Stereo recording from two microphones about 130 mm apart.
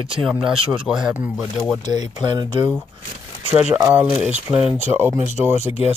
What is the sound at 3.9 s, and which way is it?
Speech, 15° right (ahead or behind).